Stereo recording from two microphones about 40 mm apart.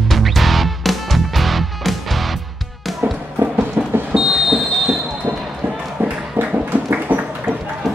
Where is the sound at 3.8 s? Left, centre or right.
Right.